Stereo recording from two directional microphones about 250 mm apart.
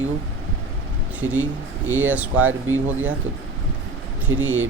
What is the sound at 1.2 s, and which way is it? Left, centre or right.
Speech, centre.